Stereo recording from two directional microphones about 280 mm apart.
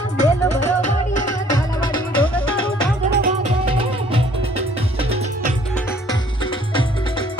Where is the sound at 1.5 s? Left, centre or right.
Centre.